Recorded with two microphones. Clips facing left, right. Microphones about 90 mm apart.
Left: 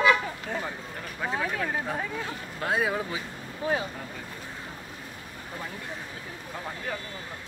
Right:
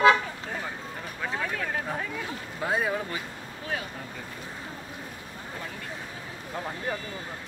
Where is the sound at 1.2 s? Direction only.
10° left (ahead or behind).